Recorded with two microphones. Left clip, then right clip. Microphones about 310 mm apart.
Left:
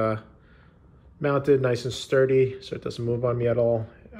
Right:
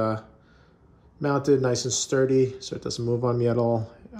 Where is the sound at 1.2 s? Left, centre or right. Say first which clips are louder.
Left 1 dB; centre.